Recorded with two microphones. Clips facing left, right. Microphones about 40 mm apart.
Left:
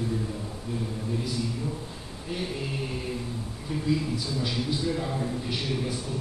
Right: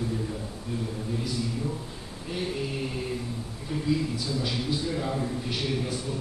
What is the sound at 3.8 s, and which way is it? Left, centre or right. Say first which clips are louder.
A man's voice: even; centre.